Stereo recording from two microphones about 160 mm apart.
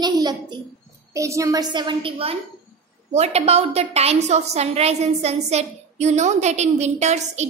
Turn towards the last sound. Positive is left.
turn(degrees=-45)  # may be behind; listen again after turning